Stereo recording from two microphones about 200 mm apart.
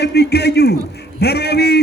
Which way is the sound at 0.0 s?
55° left (ahead or behind).